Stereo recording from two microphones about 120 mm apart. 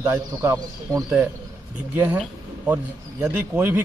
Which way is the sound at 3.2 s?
15° right (ahead or behind).